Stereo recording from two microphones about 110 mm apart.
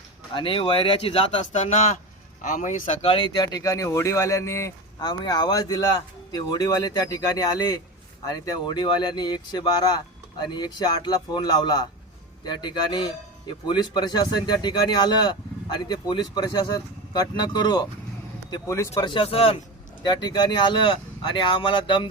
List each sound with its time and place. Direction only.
0.3 s speech: 55° left (ahead or behind); by 4.7 s 25° left (ahead or behind)
4.9 s speech: 40° left (ahead or behind)
18.7 s speech: 25° left (ahead or behind)
19.0 s speech: 55° left (ahead or behind)
20.0 s speech: 40° left (ahead or behind)